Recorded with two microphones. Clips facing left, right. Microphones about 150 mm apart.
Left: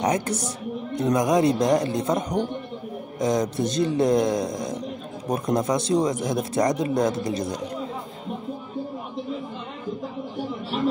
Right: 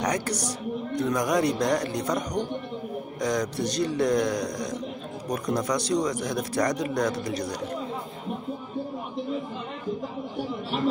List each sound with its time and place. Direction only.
0.0 s speech: 25° left (ahead or behind)
10.7 s speech: centre (ahead or behind)